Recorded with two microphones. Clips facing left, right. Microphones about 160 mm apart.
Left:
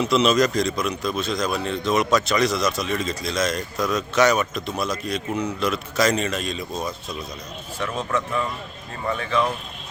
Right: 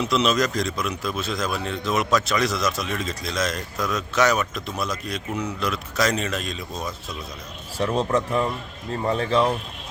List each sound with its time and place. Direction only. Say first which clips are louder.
0.0 s a man's voice: left 3 dB; centre (ahead or behind)
7.8 s a man's voice: right 4 dB; 35° right (ahead or behind)